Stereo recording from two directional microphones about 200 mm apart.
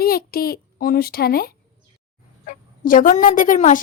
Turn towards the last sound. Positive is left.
turn(degrees=40)  # may be behind; listen again after turning